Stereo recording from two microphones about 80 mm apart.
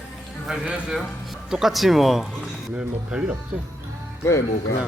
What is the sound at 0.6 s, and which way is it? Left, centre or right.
Speech, centre.